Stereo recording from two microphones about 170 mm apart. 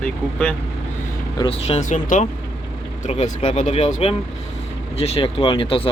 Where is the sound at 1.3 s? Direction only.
35° left (ahead or behind); by 2.3 s 50° left (ahead or behind).